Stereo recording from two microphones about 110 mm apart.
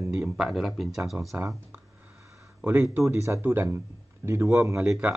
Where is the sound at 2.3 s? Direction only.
25° right (ahead or behind).